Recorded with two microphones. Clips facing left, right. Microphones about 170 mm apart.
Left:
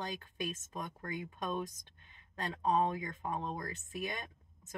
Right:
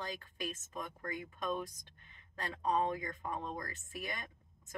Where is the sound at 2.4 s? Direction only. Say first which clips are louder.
Left 2 dB; 20° left (ahead or behind).